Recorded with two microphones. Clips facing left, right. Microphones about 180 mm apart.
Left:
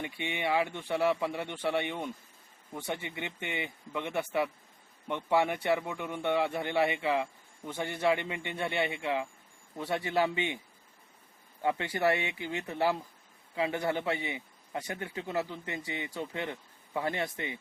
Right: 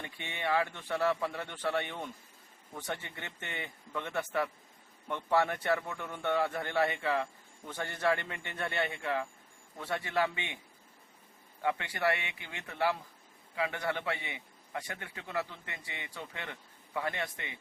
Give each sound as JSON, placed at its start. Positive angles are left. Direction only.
{"t": 0.0, "sound": "a man's voice", "side_deg": 15}
{"t": 11.6, "sound": "a man's voice", "side_deg": 25}